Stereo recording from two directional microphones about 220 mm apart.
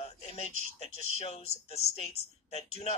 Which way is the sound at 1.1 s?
30° left (ahead or behind).